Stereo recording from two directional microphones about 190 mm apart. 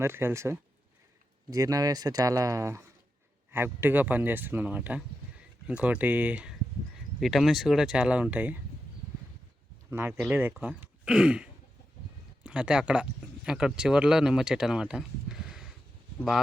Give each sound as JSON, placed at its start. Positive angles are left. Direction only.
{"t": 0.0, "sound": "speech", "side_deg": -15}
{"t": 9.9, "sound": "speech", "side_deg": -10}